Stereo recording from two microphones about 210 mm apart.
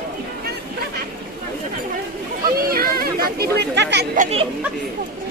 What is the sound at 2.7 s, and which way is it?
Speech, 45° right (ahead or behind).